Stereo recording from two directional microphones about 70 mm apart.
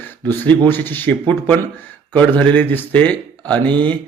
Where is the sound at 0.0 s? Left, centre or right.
Left.